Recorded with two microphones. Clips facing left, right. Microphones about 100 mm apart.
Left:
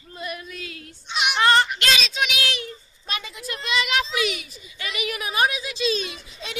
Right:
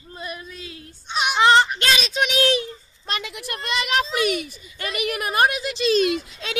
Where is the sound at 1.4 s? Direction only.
25° right (ahead or behind).